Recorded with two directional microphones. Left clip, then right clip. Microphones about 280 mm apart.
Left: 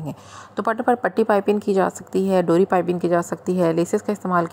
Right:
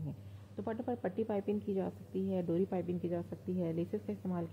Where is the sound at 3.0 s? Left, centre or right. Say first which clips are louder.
Left 19 dB; left.